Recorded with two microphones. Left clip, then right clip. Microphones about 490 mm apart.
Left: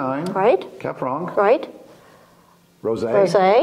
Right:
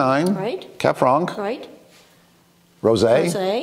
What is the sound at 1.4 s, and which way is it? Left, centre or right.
Speech, left.